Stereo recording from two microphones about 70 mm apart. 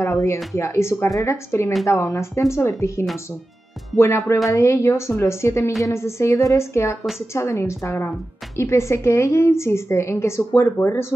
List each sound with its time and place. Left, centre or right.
0.0 s a woman's voice: left
7.0 s a woman's voice: centre
7.3 s a woman's voice: left